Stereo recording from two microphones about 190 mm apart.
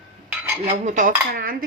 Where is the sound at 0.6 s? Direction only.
40° right (ahead or behind).